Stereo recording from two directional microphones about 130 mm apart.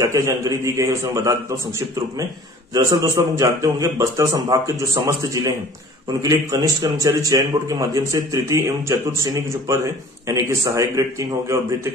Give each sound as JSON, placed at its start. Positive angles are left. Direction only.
{"t": 0.0, "sound": "speech", "side_deg": -25}
{"t": 2.7, "sound": "speech", "side_deg": -25}